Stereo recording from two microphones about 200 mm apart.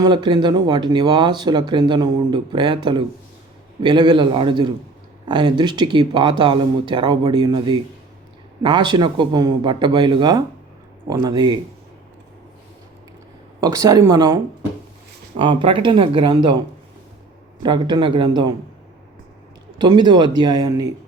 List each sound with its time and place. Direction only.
0.0 s speech: 20° right (ahead or behind)
13.6 s speech: 20° right (ahead or behind)
15.4 s speech: 25° right (ahead or behind)
19.8 s speech: 20° right (ahead or behind)